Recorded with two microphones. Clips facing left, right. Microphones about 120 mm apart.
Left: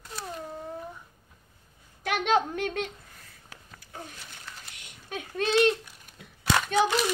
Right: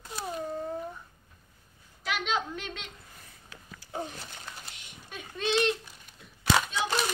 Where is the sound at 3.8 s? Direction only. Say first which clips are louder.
Right 7 dB; 30° right (ahead or behind).